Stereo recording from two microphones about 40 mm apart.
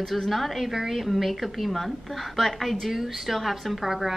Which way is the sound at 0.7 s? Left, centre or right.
Centre.